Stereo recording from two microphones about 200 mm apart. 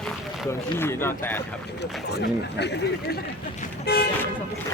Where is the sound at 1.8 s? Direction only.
55° left (ahead or behind).